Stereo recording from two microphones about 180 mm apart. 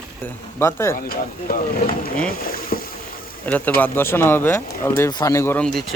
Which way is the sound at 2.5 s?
55° left (ahead or behind).